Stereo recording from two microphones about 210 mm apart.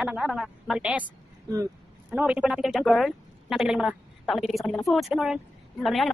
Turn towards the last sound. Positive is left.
turn(degrees=0)  # may be behind; listen again after turning